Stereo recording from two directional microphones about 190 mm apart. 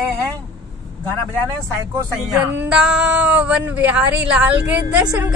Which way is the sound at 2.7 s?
5° right (ahead or behind).